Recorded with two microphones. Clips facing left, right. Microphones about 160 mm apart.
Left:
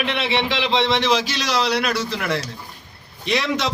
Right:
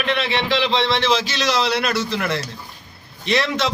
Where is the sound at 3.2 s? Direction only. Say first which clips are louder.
Right 1 dB; 10° left (ahead or behind).